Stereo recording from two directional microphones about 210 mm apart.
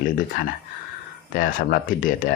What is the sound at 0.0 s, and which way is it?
Speech, 40° left (ahead or behind).